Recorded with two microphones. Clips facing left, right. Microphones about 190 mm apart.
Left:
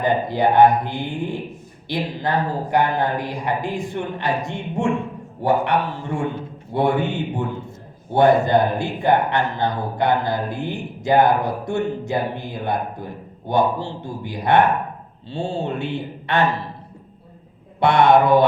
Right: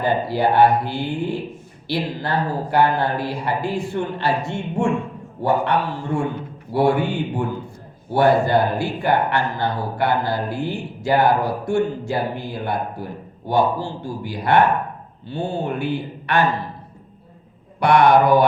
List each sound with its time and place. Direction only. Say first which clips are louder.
0.0 s speech: left 1 dB; 20° left (ahead or behind)
6.7 s speech: right 2 dB; 20° left (ahead or behind)
17.7 s speech: even; 25° left (ahead or behind)